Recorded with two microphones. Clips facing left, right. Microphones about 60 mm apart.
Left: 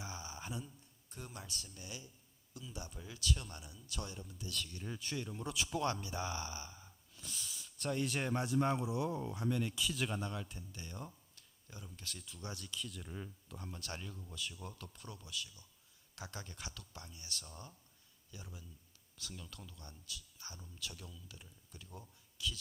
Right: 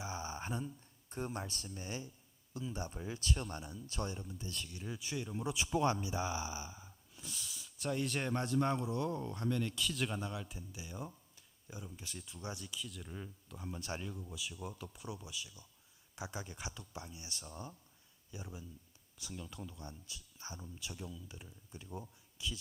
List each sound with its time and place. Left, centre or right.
0.0 s a sound: right
1.1 s speech: right
4.8 s speech: centre
5.5 s speech: right
12.8 s speech: centre
13.7 s speech: centre